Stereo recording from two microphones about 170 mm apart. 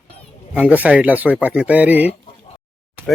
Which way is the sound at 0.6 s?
10° right (ahead or behind).